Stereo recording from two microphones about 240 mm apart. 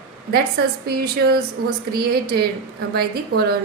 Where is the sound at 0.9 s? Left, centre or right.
Right.